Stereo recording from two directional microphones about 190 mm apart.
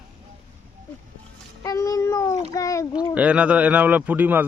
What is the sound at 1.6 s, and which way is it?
Speech, 20° left (ahead or behind).